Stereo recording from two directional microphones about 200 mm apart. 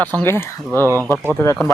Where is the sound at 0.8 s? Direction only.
15° right (ahead or behind).